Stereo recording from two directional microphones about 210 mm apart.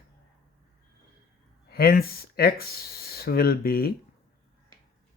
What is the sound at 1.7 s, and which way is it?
Speech, 45° left (ahead or behind).